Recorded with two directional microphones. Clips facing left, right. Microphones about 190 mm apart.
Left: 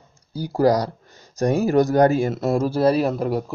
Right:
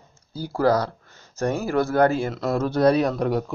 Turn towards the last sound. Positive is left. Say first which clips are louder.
# left 1 dB
turn(degrees=5)  # may be behind; listen again after turning